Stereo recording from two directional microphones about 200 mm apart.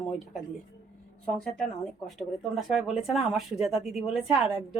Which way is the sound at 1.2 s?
5° left (ahead or behind).